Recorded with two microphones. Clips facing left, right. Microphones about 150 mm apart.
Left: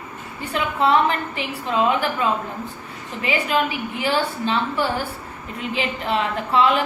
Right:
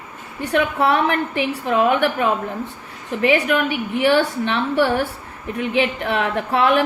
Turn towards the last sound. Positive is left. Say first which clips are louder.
# right 2 dB
turn(degrees=-65)  # may be behind; listen again after turning